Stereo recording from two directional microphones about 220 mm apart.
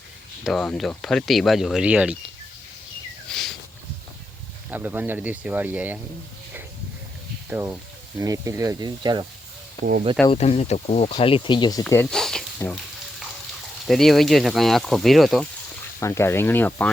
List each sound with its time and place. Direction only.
0.4 s speech: 5° left (ahead or behind)
3.2 s a sound: centre (ahead or behind)
4.7 s speech: 10° right (ahead or behind)
7.5 s speech: 10° right (ahead or behind)
10.2 s speech: 30° left (ahead or behind); by 12.8 s 5° left (ahead or behind)
13.8 s speech: centre (ahead or behind)
16.0 s speech: 10° left (ahead or behind)